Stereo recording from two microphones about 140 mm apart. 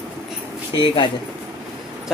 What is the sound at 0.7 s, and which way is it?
Speech, 35° left (ahead or behind).